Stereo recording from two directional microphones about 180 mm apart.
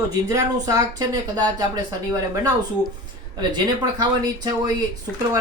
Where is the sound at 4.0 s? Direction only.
20° right (ahead or behind).